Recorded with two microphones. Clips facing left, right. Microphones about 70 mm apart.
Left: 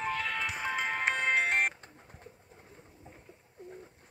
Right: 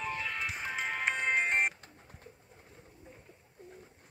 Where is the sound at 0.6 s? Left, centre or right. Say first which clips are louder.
Left 3 dB; left.